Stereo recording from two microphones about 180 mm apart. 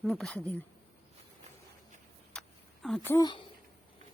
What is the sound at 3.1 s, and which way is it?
Speech, 25° left (ahead or behind).